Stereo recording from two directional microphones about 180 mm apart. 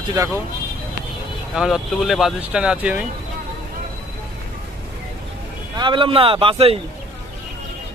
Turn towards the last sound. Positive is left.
turn(degrees=-30)  # may be behind; listen again after turning